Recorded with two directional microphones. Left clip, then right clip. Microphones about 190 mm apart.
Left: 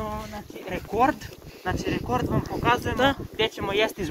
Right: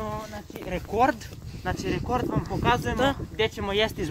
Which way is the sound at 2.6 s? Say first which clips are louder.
Left 1 dB; 25° right (ahead or behind).